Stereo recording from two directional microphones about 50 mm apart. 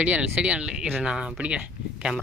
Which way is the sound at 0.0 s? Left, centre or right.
Right.